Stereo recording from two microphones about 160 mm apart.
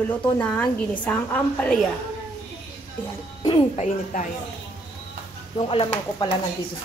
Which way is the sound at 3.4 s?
25° left (ahead or behind).